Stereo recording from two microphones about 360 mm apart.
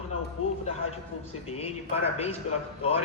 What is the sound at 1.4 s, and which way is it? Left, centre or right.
Speech, centre.